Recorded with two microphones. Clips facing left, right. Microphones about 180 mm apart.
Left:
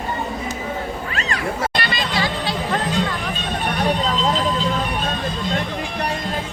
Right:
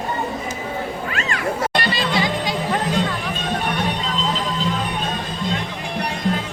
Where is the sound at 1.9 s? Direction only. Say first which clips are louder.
Right 2 dB; 20° right (ahead or behind).